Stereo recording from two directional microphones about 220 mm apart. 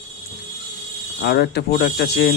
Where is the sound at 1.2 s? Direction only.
50° left (ahead or behind).